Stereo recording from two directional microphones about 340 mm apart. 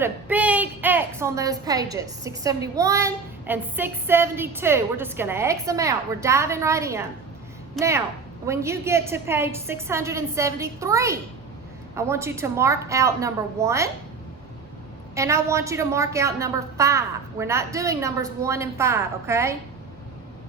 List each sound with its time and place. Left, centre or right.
0.0 s a woman's voice: centre
15.1 s a woman's voice: centre